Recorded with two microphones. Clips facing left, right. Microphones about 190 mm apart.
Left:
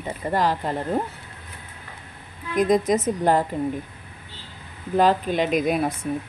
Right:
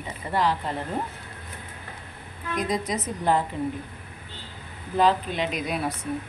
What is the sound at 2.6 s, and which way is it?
Speech, 50° left (ahead or behind).